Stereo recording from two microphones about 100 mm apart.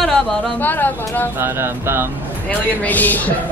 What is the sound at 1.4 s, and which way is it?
Speech, 25° right (ahead or behind).